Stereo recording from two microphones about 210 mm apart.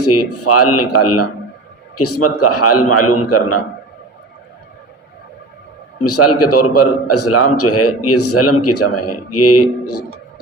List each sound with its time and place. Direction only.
0.0 s a man's voice: 90° left
6.0 s a man's voice: 90° left